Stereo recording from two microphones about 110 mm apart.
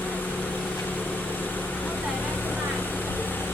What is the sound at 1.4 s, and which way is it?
Vehicle, 15° left (ahead or behind).